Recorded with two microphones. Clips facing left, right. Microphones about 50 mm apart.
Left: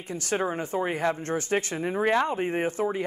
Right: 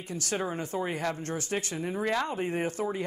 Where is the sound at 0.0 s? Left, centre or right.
Left.